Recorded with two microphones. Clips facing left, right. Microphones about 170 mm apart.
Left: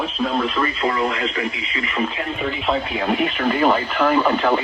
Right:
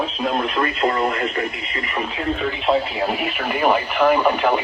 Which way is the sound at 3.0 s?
5° right (ahead or behind).